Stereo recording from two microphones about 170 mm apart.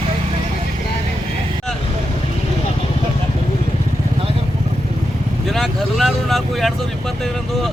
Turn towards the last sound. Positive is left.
turn(degrees=0)  # may be behind; listen again after turning